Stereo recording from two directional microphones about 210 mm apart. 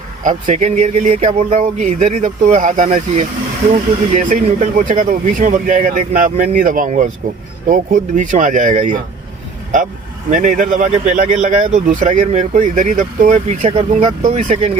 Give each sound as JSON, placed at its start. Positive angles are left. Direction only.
{"t": 0.2, "sound": "speech", "side_deg": -35}
{"t": 10.2, "sound": "speech", "side_deg": -35}